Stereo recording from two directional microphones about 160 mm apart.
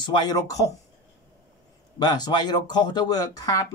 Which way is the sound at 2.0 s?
25° left (ahead or behind).